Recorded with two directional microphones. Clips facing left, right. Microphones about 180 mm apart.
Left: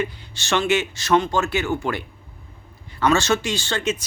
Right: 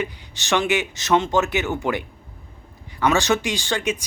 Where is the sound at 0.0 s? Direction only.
15° right (ahead or behind).